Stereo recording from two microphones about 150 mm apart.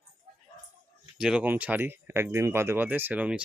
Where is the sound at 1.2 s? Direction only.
5° right (ahead or behind).